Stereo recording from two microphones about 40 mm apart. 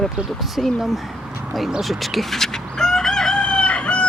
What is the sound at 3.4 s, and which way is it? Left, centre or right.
Crowing, left.